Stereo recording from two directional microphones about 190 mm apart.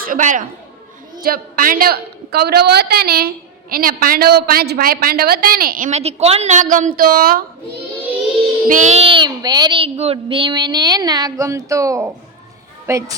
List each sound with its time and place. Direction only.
0.0 s a woman's voice: 45° right (ahead or behind)
8.6 s a woman's voice: 40° right (ahead or behind); by 13.1 s 15° right (ahead or behind)